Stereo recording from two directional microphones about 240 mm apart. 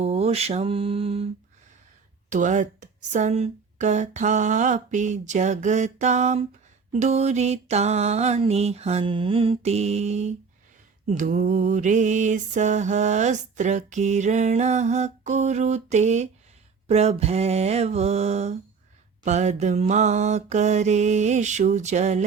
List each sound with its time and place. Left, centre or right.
0.0 s mantra: right
2.3 s speech: right
6.9 s mantra: right